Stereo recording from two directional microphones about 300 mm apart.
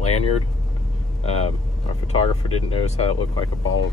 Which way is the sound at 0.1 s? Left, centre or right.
Left.